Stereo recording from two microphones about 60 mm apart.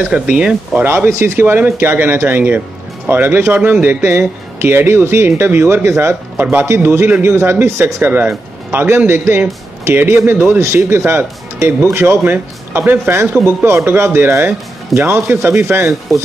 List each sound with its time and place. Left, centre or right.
0.0 s speech: centre
0.8 s a man's voice: right
6.3 s a man's voice: right
6.6 s a man's voice: right
8.0 s speech: right
10.6 s a man's voice: right